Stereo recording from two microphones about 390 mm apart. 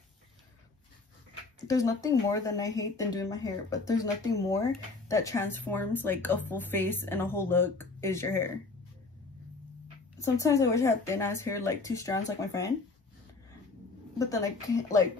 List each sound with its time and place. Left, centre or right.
1.7 s speech: centre
10.2 s speech: centre
14.1 s speech: centre